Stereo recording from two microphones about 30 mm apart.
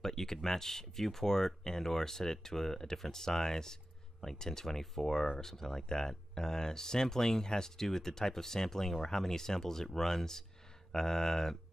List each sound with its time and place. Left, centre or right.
0.0 s speech: centre